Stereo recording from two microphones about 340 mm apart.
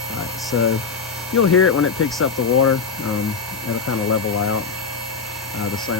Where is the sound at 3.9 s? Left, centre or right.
Left.